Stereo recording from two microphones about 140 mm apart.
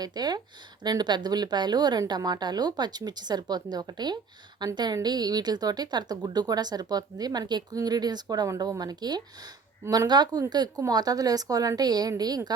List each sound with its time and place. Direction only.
0.0 s a woman's voice: 30° right (ahead or behind)